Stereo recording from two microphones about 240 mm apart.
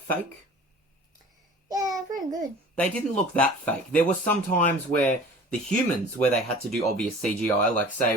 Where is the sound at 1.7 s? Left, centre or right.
Centre.